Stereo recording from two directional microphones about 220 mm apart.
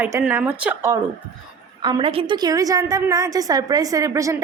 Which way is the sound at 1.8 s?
20° right (ahead or behind).